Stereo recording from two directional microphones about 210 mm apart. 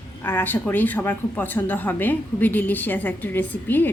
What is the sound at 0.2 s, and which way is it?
Speech, 10° left (ahead or behind).